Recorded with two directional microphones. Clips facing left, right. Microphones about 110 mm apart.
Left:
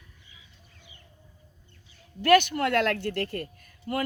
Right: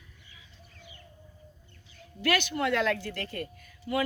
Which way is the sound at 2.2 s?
50° left (ahead or behind).